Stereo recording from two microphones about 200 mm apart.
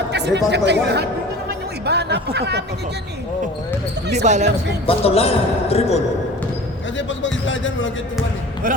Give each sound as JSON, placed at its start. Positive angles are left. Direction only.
{"t": 0.1, "sound": "speech", "side_deg": -60}
{"t": 4.1, "sound": "speech", "side_deg": -35}
{"t": 4.9, "sound": "a man's voice", "side_deg": 30}
{"t": 6.9, "sound": "speech", "side_deg": 70}